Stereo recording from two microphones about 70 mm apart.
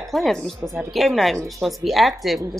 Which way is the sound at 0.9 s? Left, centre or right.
Centre.